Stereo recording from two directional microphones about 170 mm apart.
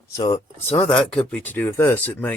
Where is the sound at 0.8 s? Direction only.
5° left (ahead or behind).